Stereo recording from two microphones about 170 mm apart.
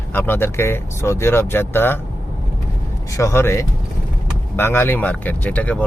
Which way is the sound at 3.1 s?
15° left (ahead or behind).